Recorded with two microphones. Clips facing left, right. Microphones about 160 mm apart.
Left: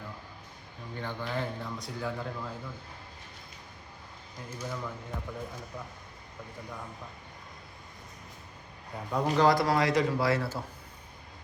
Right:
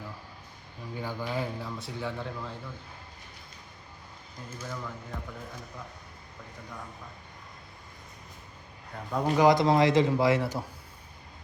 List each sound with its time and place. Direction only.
0.9 s speech: 10° right (ahead or behind)
4.5 s speech: 10° left (ahead or behind)
9.3 s a man's voice: 15° right (ahead or behind)